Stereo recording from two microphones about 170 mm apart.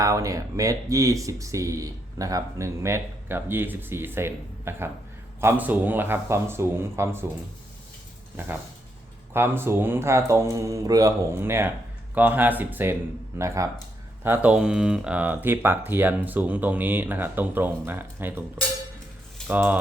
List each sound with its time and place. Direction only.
0.0 s speech: 20° right (ahead or behind)
8.4 s speech: 10° right (ahead or behind)
14.3 s speech: 5° right (ahead or behind)
19.5 s speech: 10° right (ahead or behind)